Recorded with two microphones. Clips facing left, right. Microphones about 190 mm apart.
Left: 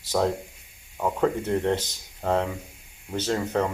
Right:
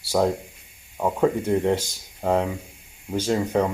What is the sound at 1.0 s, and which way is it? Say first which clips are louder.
Speech: right 3 dB; 10° right (ahead or behind).